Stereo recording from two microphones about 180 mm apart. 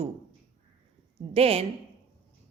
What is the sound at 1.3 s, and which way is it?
Speech, 35° right (ahead or behind).